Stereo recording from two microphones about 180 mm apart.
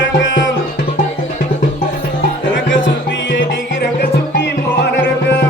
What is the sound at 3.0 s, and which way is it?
Music, 85° left.